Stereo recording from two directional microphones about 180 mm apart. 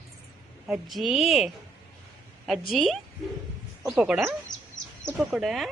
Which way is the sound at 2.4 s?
Centre (ahead or behind).